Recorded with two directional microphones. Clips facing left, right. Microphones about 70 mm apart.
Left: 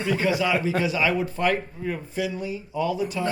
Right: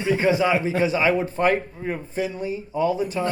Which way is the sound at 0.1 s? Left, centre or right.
Right.